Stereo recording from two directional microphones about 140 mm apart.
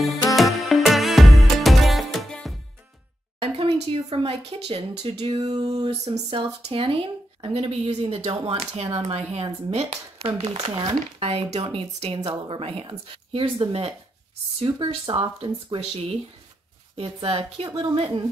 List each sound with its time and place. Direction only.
0.4 s music: centre (ahead or behind)
3.3 s a sound: 45° right (ahead or behind)
4.1 s speech: 45° right (ahead or behind)
5.8 s speech: 50° right (ahead or behind)
10.7 s a woman's voice: 30° right (ahead or behind)
11.1 s speech: 50° right (ahead or behind)
15.8 s speech: 50° right (ahead or behind)
17.6 s a woman's voice: 30° right (ahead or behind)
17.9 s speech: 45° right (ahead or behind)